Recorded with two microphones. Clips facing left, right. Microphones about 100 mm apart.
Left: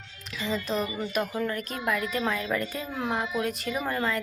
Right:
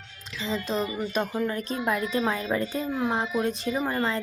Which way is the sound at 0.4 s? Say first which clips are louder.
Right 1 dB; 20° right (ahead or behind).